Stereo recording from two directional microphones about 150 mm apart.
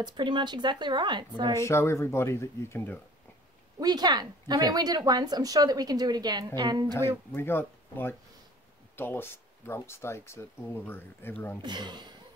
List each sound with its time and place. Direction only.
0.0 s a woman's voice: 30° right (ahead or behind)
1.6 s speech: 20° left (ahead or behind)
3.8 s speech: 25° right (ahead or behind)
7.3 s speech: 15° left (ahead or behind)
11.6 s speech: 30° right (ahead or behind)